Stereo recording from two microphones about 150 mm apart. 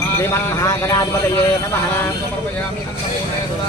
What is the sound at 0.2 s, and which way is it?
Speech, 20° left (ahead or behind).